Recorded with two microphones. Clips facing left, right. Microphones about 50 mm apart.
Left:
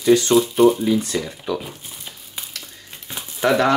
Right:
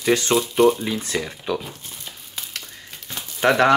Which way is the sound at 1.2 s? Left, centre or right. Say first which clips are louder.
Even; right.